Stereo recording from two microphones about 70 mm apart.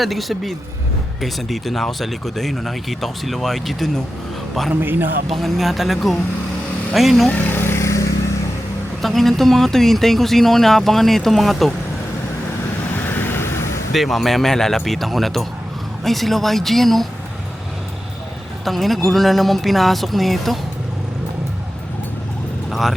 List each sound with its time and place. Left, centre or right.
0.0 s speech: centre
4.7 s a man's voice: right
5.3 s speech: centre
7.3 s vehicle: left
9.0 s speech: centre
13.0 s vehicle: left
13.9 s speech: centre
18.6 s speech: centre
22.7 s vehicle: centre